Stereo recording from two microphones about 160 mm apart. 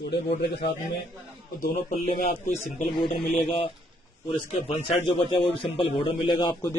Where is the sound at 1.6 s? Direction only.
65° left (ahead or behind).